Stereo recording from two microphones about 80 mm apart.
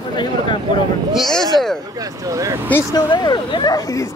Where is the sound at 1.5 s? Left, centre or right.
Centre.